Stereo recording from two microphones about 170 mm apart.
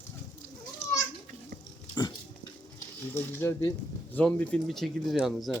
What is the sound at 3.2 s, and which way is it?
Speech, 15° left (ahead or behind).